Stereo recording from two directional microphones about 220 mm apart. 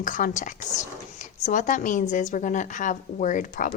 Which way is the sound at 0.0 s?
35° left (ahead or behind).